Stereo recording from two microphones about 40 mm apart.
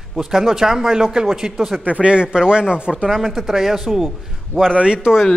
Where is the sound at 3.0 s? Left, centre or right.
Centre.